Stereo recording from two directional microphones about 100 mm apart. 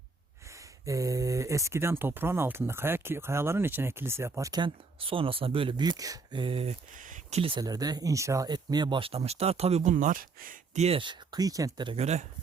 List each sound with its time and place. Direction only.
0.4 s speech: 30° right (ahead or behind)
4.6 s speech: 65° right (ahead or behind)
5.8 s speech: 40° right (ahead or behind)
6.3 s speech: 60° right (ahead or behind)
7.3 s speech: 90° right
7.6 s speech: 40° right (ahead or behind)
8.4 s speech: 45° right (ahead or behind); by 11.0 s 90° right
11.0 s speech: 45° right (ahead or behind)